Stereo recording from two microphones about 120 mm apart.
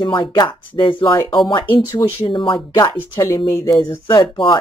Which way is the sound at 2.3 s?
45° left (ahead or behind).